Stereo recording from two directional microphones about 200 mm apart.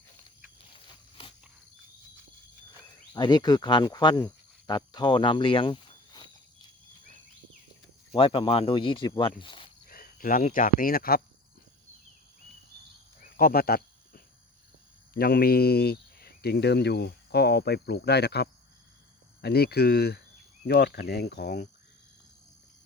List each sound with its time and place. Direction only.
3.1 s speech: 20° left (ahead or behind)
8.1 s speech: 25° left (ahead or behind)
9.9 s speech: 45° left (ahead or behind)
13.3 s a sound: 45° left (ahead or behind)
15.1 s speech: 50° left (ahead or behind)